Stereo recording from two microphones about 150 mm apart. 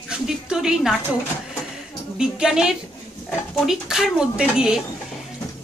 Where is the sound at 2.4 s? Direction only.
5° right (ahead or behind).